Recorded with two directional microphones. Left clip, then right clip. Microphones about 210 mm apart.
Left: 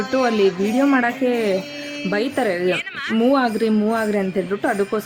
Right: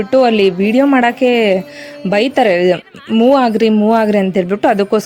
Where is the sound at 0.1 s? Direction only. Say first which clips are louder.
Right 8 dB; 25° right (ahead or behind).